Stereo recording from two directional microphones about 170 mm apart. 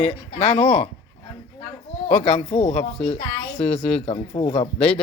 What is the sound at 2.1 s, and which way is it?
Speech, 40° left (ahead or behind).